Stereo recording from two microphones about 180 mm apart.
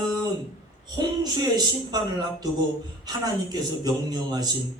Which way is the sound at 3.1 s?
20° right (ahead or behind).